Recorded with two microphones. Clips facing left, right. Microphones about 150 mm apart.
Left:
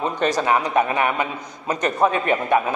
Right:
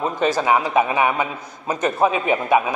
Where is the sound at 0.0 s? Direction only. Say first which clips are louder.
Right 1 dB; 5° right (ahead or behind).